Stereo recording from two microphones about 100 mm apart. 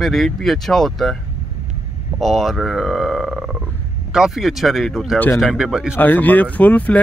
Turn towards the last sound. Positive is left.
turn(degrees=15)  # may be behind; listen again after turning